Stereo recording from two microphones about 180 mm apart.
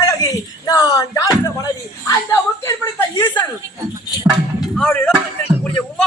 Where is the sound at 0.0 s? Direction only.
20° left (ahead or behind).